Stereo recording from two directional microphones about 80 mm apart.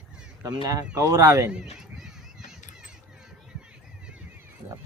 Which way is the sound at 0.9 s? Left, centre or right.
Right.